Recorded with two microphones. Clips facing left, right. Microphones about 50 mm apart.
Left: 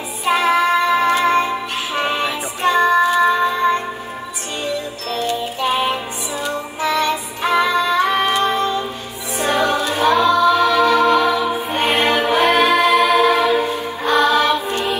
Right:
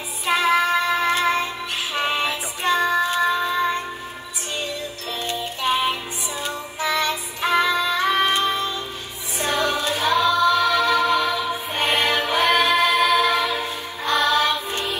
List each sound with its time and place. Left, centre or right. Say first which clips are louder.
0.2 s music: left 3 dB; centre
5.3 s music: left 2 dB; centre
9.4 s choir: left 5 dB; centre
14.7 s music: left 6 dB; left